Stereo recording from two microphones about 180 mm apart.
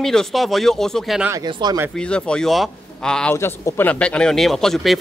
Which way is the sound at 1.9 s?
5° left (ahead or behind).